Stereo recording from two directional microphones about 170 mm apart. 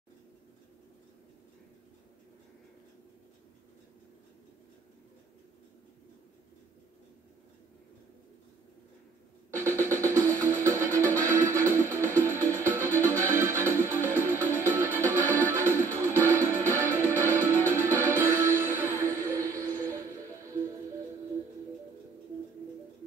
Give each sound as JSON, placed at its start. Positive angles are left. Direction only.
{"t": 9.6, "sound": "music", "side_deg": -15}